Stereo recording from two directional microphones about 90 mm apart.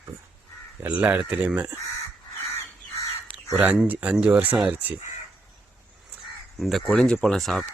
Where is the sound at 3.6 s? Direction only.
15° right (ahead or behind).